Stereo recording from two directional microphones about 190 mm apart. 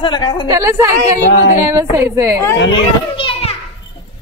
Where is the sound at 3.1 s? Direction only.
30° left (ahead or behind).